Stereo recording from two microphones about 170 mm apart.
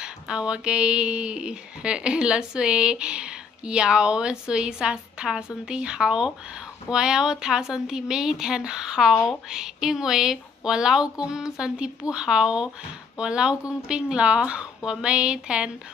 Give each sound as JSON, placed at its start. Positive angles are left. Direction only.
{"t": 0.0, "sound": "speech", "side_deg": -5}
{"t": 9.1, "sound": "speech", "side_deg": 10}
{"t": 9.5, "sound": "speech", "side_deg": -5}